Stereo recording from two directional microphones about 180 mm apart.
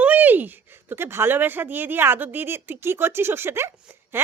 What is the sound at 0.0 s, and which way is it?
A woman's voice, 10° right (ahead or behind).